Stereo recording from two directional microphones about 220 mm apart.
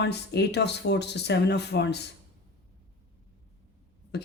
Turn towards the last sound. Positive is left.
turn(degrees=50)  # may be behind; listen again after turning